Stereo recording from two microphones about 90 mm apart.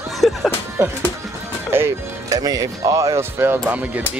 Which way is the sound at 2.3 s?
45° right (ahead or behind).